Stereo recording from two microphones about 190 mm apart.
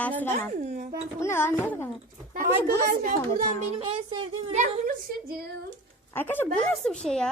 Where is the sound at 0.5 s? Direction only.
40° right (ahead or behind).